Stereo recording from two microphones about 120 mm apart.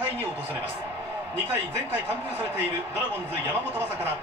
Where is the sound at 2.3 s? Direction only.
20° right (ahead or behind).